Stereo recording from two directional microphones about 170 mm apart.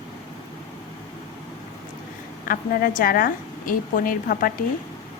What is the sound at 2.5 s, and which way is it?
A woman's voice, 55° left (ahead or behind).